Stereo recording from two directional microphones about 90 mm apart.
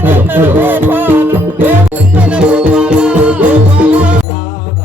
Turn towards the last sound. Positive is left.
turn(degrees=-15)  # may be behind; listen again after turning